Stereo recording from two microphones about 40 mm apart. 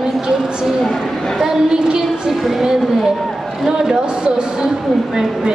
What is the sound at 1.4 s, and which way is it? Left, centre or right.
A woman's voice, centre.